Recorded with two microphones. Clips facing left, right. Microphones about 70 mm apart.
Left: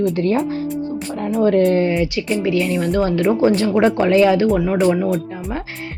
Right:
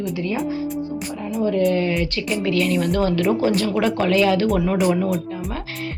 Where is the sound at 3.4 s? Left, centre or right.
Left.